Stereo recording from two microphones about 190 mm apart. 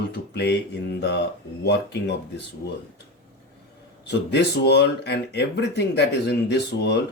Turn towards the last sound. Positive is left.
turn(degrees=65)  # may be behind; listen again after turning